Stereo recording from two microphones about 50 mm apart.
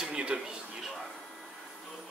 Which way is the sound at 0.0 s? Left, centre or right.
Centre.